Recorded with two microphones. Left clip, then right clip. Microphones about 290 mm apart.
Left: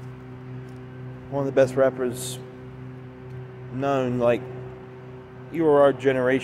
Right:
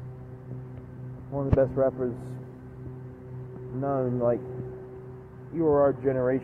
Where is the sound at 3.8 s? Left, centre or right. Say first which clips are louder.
Left 4 dB; left.